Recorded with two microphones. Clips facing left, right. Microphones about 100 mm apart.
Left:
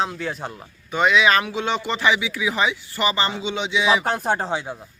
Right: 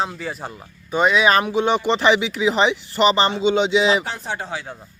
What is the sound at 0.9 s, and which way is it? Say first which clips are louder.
Speech: right 1 dB; 35° right (ahead or behind).